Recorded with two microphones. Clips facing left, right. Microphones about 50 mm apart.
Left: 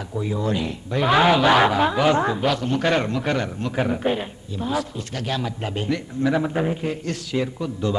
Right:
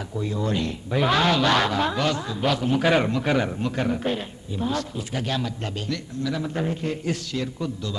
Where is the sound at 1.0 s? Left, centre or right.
Centre.